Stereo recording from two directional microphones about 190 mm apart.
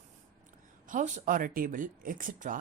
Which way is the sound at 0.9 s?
40° right (ahead or behind).